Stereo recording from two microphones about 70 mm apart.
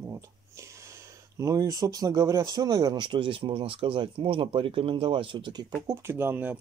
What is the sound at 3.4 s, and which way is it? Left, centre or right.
Speech, right.